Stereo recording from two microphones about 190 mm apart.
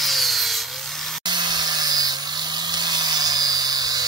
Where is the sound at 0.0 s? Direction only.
Centre (ahead or behind).